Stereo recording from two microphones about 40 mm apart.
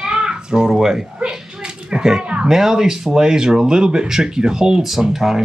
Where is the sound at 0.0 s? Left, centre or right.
Right.